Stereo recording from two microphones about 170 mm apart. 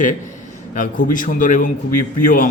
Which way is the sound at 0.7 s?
50° left (ahead or behind).